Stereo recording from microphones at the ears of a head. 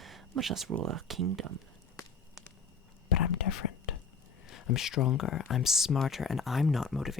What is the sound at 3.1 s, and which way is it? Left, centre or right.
Whispering, left.